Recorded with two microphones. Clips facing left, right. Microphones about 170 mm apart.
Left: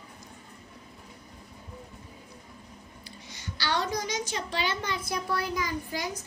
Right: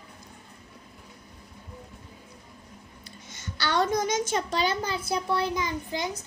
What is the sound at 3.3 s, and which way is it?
A woman's voice, 50° right (ahead or behind).